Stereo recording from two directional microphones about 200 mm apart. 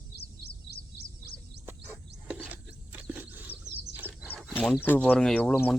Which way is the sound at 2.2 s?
5° right (ahead or behind).